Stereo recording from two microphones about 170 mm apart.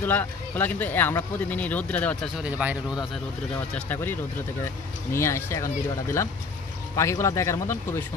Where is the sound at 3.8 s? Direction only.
10° left (ahead or behind).